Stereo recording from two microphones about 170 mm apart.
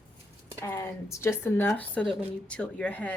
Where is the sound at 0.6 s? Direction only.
15° left (ahead or behind).